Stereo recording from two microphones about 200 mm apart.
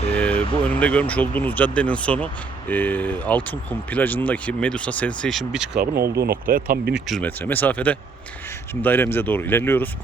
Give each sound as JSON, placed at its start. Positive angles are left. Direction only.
{"t": 0.1, "sound": "vehicle", "side_deg": 5}
{"t": 0.6, "sound": "speech", "side_deg": 5}
{"t": 5.8, "sound": "speech", "side_deg": -50}
{"t": 7.1, "sound": "speech", "side_deg": 10}